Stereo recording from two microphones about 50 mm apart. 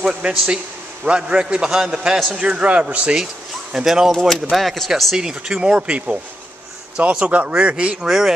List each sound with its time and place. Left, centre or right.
0.0 s a man's voice: right
3.7 s speech: centre
4.1 s speech: centre
5.1 s a man's voice: centre
8.0 s speech: centre